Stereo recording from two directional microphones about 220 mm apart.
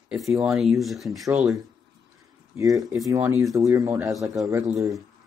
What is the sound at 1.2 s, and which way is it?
Speech, 10° right (ahead or behind).